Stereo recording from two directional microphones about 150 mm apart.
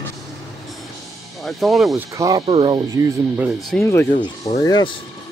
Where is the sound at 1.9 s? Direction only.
20° right (ahead or behind).